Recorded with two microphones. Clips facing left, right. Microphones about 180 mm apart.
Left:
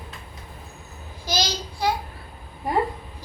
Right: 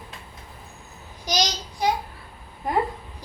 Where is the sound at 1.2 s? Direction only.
15° right (ahead or behind).